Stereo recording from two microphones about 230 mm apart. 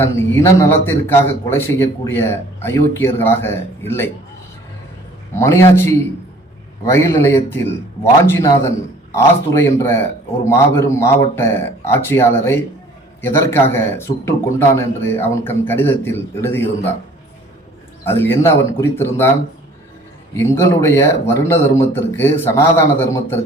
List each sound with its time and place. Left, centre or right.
0.0 s a man's voice: centre
5.3 s a man's voice: centre
18.0 s a man's voice: centre
20.3 s a man's voice: centre